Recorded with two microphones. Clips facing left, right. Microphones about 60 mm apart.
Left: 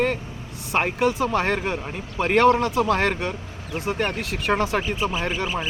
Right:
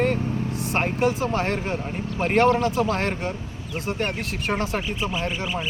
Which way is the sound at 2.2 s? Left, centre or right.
Left.